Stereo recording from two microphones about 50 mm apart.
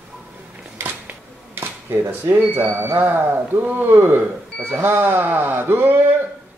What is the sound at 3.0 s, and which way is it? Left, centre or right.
Speech, right.